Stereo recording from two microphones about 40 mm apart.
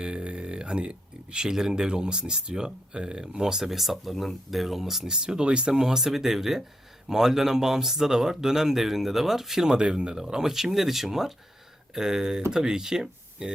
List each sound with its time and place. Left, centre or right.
0.0 s speech: right; by 5.0 s centre
5.0 s speech: centre
5.8 s speech: centre
9.6 s speech: right